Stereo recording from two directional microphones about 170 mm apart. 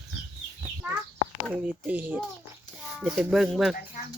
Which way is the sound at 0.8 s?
10° right (ahead or behind).